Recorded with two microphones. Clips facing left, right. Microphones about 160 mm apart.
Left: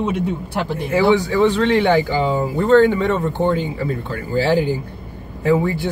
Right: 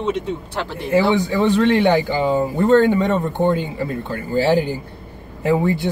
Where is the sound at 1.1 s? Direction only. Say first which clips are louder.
Left 1 dB; 15° right (ahead or behind).